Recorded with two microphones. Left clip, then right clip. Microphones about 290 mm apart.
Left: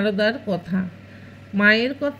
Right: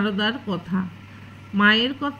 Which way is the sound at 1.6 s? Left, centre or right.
Left.